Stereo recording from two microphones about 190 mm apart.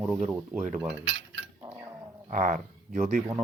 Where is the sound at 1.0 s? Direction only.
70° right (ahead or behind).